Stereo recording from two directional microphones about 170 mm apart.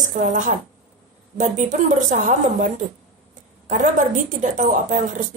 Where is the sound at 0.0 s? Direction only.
45° right (ahead or behind).